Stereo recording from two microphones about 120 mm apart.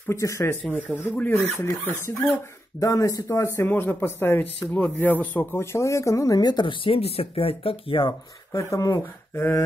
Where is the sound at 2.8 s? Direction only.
30° left (ahead or behind).